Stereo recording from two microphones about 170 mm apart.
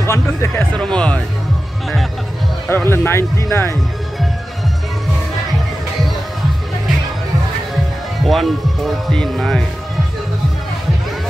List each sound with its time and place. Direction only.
0.0 s speech: 15° left (ahead or behind)
0.7 s music: 5° left (ahead or behind)
2.7 s speech: 10° left (ahead or behind)
7.7 s speech: centre (ahead or behind)